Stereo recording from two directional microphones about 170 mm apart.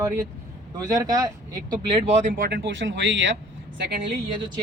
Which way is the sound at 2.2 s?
45° right (ahead or behind).